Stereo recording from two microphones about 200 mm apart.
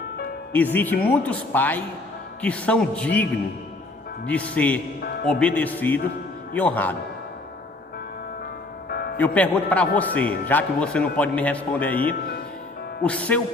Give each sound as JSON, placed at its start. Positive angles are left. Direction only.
{"t": 0.5, "sound": "a man's voice", "side_deg": 10}
{"t": 4.3, "sound": "a man's voice", "side_deg": 5}
{"t": 8.9, "sound": "music", "side_deg": 50}
{"t": 9.1, "sound": "a man's voice", "side_deg": 5}
{"t": 11.9, "sound": "speech", "side_deg": 45}
{"t": 13.0, "sound": "a man's voice", "side_deg": 5}